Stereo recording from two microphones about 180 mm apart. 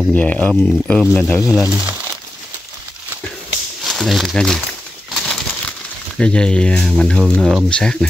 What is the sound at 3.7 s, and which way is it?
Bird, centre (ahead or behind).